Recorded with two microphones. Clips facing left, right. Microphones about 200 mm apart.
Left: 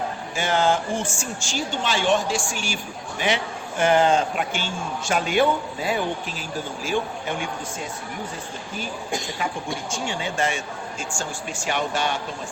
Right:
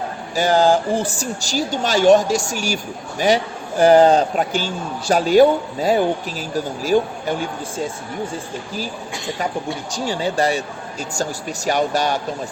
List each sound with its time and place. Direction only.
0.3 s a man's voice: 35° right (ahead or behind)
9.9 s a man's voice: 35° right (ahead or behind)